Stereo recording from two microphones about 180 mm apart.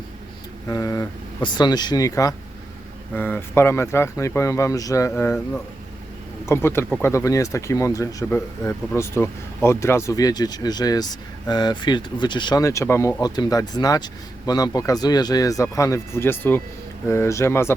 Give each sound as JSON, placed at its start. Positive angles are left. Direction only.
{"t": 0.7, "sound": "speech", "side_deg": 20}
{"t": 6.4, "sound": "speech", "side_deg": 15}